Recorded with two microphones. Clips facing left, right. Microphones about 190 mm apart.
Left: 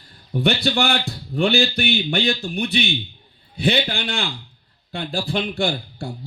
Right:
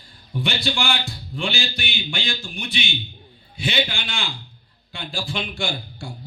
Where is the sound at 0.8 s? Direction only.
60° left (ahead or behind).